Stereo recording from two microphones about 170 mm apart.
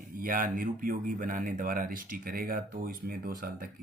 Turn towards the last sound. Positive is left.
turn(degrees=-60)  # may be behind; listen again after turning